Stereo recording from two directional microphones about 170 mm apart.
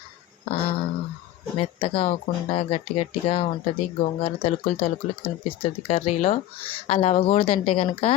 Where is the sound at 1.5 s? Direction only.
35° left (ahead or behind).